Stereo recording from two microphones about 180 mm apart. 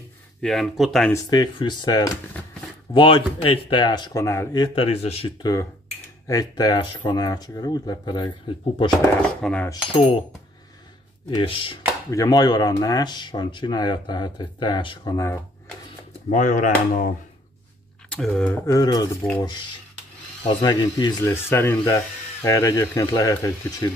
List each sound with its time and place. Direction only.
0.4 s speech: centre (ahead or behind)
1.1 s speech: 20° left (ahead or behind)
4.7 s speech: 35° left (ahead or behind)
5.4 s speech: 20° left (ahead or behind)
9.4 s speech: 5° left (ahead or behind)
9.7 s speech: 30° left (ahead or behind)
11.2 s speech: 30° left (ahead or behind)
12.1 s speech: 20° left (ahead or behind)
16.3 s speech: 45° left (ahead or behind)
18.1 s speech: centre (ahead or behind)
18.7 s speech: 20° left (ahead or behind)
20.6 s speech: 25° left (ahead or behind)